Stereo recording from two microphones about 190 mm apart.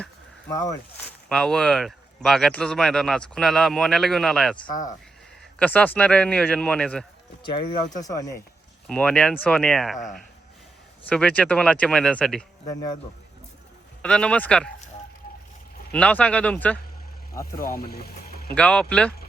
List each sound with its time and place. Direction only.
0.0 s a sound: 15° left (ahead or behind)
1.3 s speech: 5° left (ahead or behind)
4.7 s speech: 45° left (ahead or behind)
5.5 s speech: 10° left (ahead or behind)
7.4 s speech: 25° left (ahead or behind)
8.9 s speech: 5° left (ahead or behind)
11.1 s speech: 5° left (ahead or behind)
14.0 s speech: 5° left (ahead or behind)
15.9 s speech: 5° left (ahead or behind)
17.6 s speech: 50° left (ahead or behind)
18.5 s speech: 5° left (ahead or behind)